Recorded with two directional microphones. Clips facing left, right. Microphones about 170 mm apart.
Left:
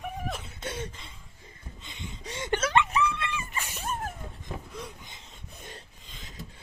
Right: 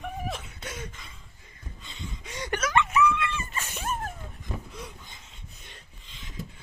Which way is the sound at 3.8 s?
Centre (ahead or behind).